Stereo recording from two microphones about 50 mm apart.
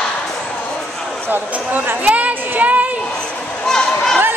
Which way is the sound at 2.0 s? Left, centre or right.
Right.